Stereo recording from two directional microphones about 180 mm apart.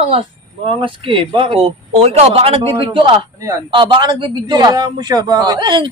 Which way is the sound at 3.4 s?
15° right (ahead or behind).